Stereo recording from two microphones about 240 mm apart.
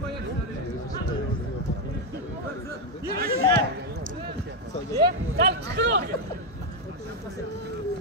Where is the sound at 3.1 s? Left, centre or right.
Right.